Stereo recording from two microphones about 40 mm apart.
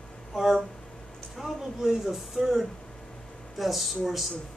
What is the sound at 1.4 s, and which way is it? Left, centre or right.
Speech, centre.